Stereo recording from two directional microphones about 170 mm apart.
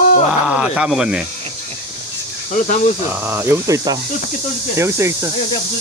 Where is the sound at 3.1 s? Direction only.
15° right (ahead or behind).